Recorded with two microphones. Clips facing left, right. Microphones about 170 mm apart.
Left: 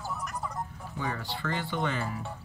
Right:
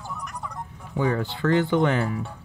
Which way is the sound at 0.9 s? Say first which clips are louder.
Right 13 dB; 70° right (ahead or behind).